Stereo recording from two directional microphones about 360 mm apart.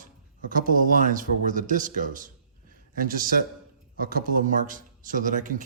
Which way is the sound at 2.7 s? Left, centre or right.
Right.